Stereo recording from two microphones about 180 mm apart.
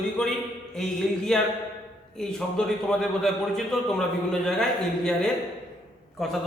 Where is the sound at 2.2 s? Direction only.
5° left (ahead or behind).